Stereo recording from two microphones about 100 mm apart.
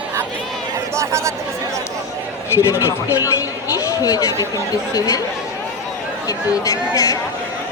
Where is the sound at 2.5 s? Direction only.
30° left (ahead or behind).